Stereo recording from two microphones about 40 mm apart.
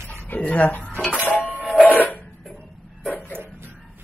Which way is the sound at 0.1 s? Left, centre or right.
Left.